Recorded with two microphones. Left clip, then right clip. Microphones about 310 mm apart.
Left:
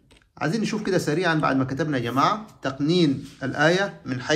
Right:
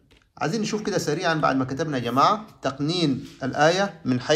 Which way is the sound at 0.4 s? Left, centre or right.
Centre.